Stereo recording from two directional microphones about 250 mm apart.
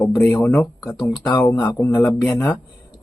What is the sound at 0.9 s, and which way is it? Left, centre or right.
Speech, centre.